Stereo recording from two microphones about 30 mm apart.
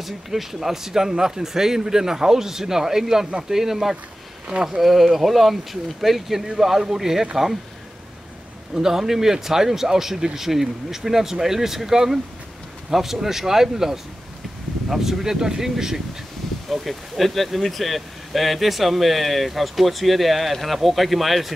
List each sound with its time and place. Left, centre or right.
0.0 s speech: centre
8.7 s speech: centre
16.6 s speech: centre